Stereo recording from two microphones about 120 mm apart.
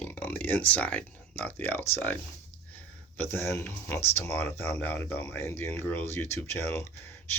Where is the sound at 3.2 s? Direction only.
20° left (ahead or behind).